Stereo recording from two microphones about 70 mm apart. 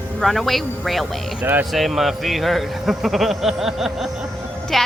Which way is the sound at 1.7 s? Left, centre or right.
Centre.